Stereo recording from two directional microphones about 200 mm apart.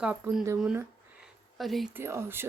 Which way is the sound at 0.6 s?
5° right (ahead or behind).